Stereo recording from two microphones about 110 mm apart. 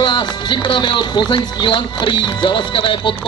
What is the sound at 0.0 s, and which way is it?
Speech, 45° left (ahead or behind).